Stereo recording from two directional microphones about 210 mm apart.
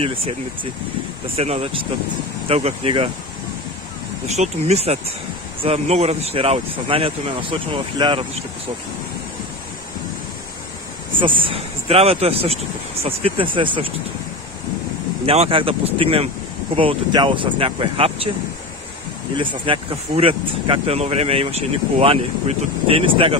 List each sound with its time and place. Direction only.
1.3 s speech: 30° right (ahead or behind)
4.3 s speech: 30° right (ahead or behind)
11.1 s speech: 25° right (ahead or behind)
15.2 s speech: 30° right (ahead or behind)
19.3 s speech: 25° right (ahead or behind)